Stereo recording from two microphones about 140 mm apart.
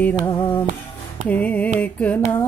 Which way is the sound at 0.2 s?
35° left (ahead or behind).